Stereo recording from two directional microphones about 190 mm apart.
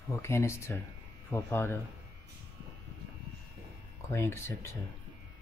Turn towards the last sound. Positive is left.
turn(degrees=15)  # may be behind; listen again after turning